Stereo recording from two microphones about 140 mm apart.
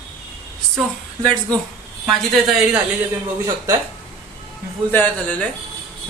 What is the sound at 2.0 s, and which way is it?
Speech, 5° right (ahead or behind).